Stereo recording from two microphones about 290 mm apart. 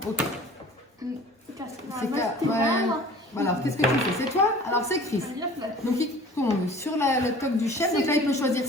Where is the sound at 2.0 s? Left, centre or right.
Centre.